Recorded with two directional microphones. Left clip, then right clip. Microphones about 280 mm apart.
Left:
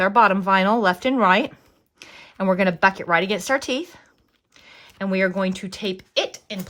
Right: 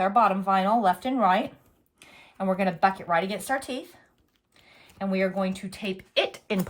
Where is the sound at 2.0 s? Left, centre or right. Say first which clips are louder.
Left 5 dB; left.